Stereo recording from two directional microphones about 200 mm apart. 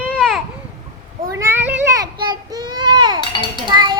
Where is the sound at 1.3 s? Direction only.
10° right (ahead or behind).